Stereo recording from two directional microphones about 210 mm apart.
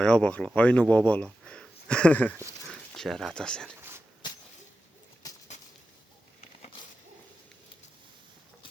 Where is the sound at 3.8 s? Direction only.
10° right (ahead or behind).